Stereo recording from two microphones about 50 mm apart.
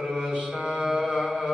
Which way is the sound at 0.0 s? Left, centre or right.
Centre.